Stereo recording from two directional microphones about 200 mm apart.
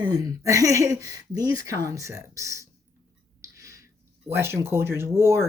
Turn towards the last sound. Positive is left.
turn(degrees=-10)  # may be behind; listen again after turning